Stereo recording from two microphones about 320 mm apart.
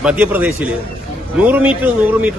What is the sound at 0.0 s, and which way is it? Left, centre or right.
A man's voice, centre.